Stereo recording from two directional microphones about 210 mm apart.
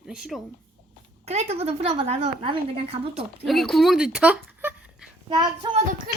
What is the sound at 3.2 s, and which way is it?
Speech, centre (ahead or behind).